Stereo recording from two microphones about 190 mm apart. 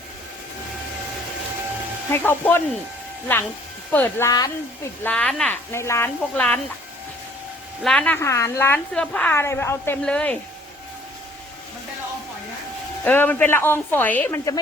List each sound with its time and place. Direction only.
2.0 s a woman's voice: 10° left (ahead or behind)
3.9 s a woman's voice: 10° left (ahead or behind)
5.0 s a woman's voice: 5° left (ahead or behind)
7.9 s a woman's voice: 5° left (ahead or behind)
13.1 s a woman's voice: 10° left (ahead or behind)